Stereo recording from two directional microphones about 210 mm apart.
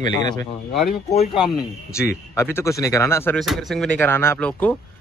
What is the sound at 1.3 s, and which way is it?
Speech, centre (ahead or behind).